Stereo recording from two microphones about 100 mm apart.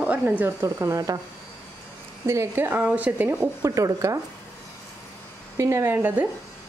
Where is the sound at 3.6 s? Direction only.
35° right (ahead or behind).